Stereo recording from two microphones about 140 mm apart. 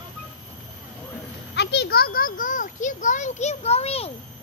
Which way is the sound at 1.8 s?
90° left.